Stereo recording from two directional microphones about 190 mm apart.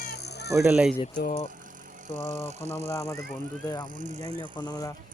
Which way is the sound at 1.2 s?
45° left (ahead or behind).